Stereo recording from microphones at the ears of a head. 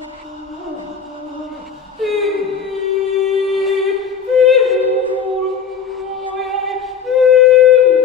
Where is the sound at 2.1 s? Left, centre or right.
Left.